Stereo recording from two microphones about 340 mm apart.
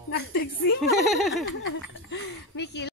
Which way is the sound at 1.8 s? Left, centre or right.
Left.